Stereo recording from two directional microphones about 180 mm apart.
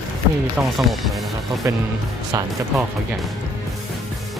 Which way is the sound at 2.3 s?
20° right (ahead or behind).